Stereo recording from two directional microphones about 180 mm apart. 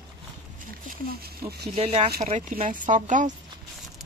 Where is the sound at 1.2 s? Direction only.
60° right (ahead or behind).